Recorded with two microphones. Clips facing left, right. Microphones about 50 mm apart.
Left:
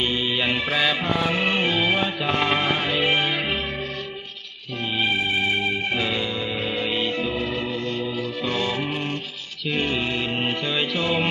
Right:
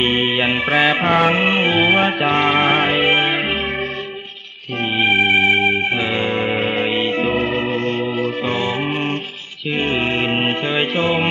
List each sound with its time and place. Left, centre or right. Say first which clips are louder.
0.0 s music: right 6 dB; right
1.4 s music: right 6 dB; right
2.4 s music: right 7 dB; right
4.9 s organ: right 8 dB; right
5.9 s music: right 5 dB; right
6.2 s music: right 8 dB; right
9.7 s music: right 6 dB; right